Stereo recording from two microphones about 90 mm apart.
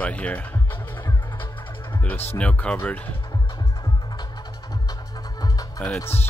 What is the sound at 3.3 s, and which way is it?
Music, 45° left (ahead or behind).